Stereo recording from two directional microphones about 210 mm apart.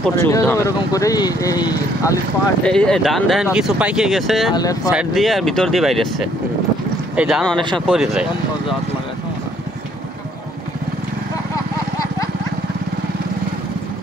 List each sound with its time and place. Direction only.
0.0 s speech: 10° left (ahead or behind)
2.6 s speech: 5° left (ahead or behind)
4.6 s speech: 15° left (ahead or behind)
4.9 s speech: centre (ahead or behind)